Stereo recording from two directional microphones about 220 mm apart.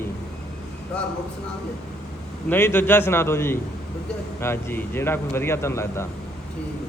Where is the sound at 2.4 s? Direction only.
10° left (ahead or behind).